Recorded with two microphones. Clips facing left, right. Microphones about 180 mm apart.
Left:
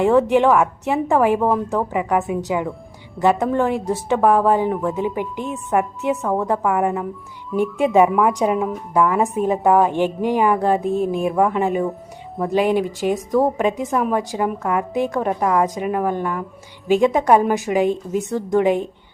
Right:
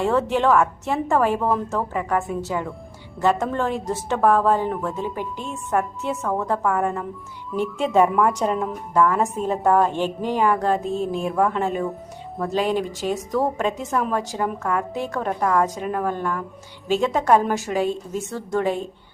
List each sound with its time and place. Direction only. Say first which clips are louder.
0.0 s a woman's voice: left 5 dB; 15° left (ahead or behind)